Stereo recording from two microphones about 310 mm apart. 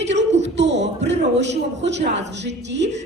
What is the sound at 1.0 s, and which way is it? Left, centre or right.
A man's voice, right.